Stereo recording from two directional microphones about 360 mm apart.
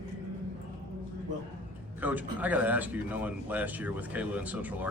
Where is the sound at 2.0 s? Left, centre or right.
Centre.